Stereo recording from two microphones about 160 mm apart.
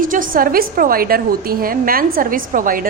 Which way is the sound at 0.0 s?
60° right (ahead or behind).